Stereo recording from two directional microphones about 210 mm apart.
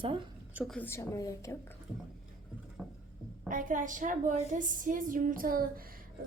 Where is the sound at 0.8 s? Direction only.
10° left (ahead or behind).